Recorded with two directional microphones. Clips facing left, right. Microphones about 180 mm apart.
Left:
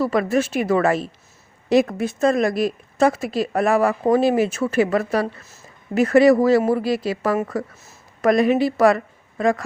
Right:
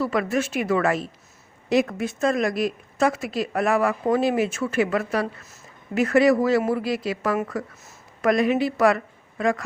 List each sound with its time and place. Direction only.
0.0 s a woman's voice: 35° left (ahead or behind)